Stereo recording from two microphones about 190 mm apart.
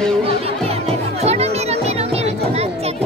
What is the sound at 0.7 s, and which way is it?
Music, 35° right (ahead or behind).